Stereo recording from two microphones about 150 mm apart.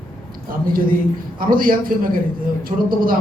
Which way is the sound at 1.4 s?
70° right (ahead or behind).